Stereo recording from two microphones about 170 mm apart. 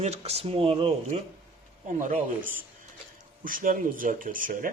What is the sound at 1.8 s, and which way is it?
Speech, 50° right (ahead or behind).